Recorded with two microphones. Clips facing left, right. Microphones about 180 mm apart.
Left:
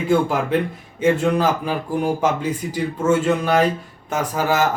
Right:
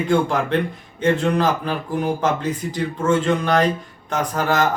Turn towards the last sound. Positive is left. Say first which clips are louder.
# even
turn(degrees=10)  # may be behind; listen again after turning